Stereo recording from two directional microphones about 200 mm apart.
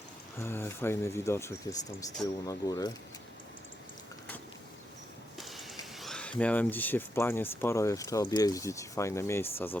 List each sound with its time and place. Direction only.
0.3 s speech: 10° left (ahead or behind)
5.4 s a sound: centre (ahead or behind)
6.4 s speech: 10° left (ahead or behind)